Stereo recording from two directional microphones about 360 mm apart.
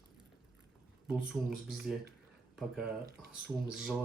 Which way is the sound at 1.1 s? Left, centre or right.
Centre.